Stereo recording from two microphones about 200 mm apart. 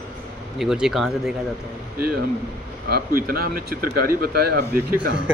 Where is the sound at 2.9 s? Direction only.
50° right (ahead or behind).